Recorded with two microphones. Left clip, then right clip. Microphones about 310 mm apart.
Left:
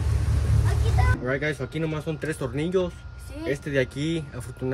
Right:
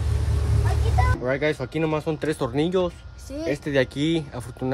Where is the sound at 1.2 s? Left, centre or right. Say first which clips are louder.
Right 3 dB; right.